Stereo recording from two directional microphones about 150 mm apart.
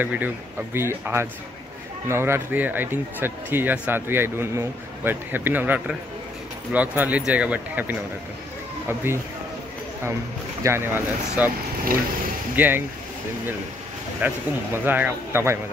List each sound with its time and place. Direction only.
0.0 s speech: 10° right (ahead or behind)
10.6 s speech: 15° right (ahead or behind)
12.5 s speech: 10° right (ahead or behind)
14.2 s speech: 10° right (ahead or behind)